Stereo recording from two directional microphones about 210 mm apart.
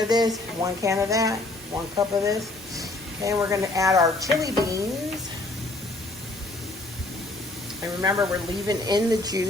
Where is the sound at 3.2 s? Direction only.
15° right (ahead or behind).